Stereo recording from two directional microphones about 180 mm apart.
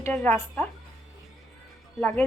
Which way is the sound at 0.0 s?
10° left (ahead or behind).